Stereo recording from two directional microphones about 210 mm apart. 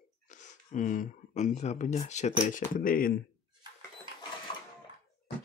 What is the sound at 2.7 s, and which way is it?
Speech, 40° left (ahead or behind).